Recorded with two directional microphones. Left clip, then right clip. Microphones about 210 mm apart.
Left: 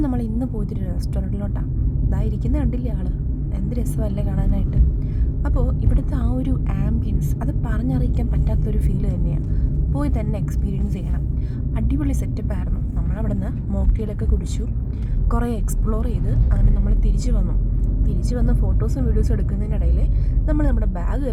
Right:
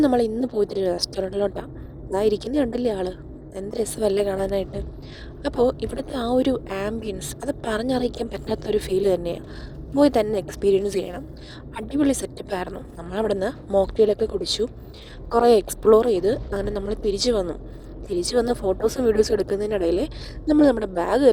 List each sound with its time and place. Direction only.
0.0 s speech: 30° right (ahead or behind)